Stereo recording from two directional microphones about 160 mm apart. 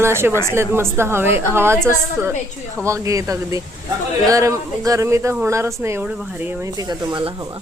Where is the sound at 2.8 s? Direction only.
20° right (ahead or behind).